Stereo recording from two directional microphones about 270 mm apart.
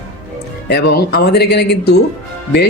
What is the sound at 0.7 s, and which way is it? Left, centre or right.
Speech, left.